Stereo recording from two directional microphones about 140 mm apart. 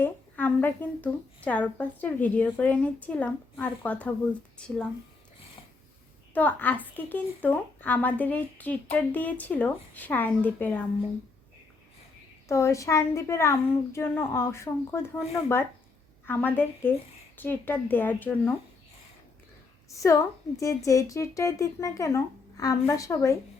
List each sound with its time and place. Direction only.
0.0 s a woman's voice: 15° left (ahead or behind)
6.3 s a woman's voice: 10° left (ahead or behind)
12.5 s a woman's voice: 20° left (ahead or behind)
19.9 s a woman's voice: 20° left (ahead or behind)